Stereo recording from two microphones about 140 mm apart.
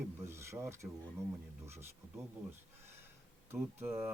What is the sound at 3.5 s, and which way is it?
Speech, 15° right (ahead or behind).